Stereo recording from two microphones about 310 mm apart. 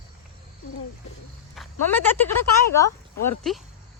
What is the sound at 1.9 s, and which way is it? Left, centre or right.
Speech, centre.